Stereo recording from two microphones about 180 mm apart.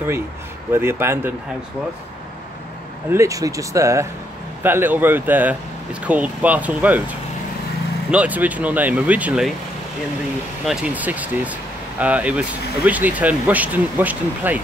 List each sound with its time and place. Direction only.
0.7 s speech: 15° right (ahead or behind)
3.1 s speech: 15° right (ahead or behind)
8.1 s speech: 10° right (ahead or behind)
10.6 s speech: 5° right (ahead or behind)